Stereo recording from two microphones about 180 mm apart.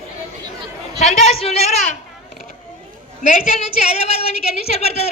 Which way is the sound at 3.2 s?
40° left (ahead or behind).